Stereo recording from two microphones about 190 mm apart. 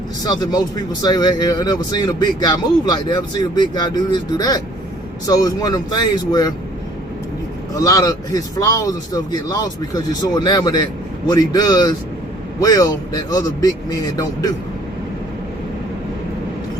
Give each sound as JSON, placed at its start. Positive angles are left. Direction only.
{"t": 0.3, "sound": "speech", "side_deg": 20}
{"t": 7.8, "sound": "speech", "side_deg": 20}